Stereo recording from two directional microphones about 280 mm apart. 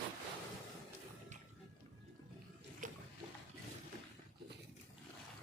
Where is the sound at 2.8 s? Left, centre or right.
Right.